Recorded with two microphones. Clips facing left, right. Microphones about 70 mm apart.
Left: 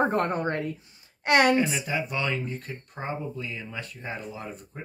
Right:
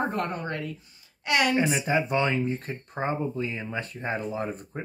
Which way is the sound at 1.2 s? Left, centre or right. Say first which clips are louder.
Left 4 dB; left.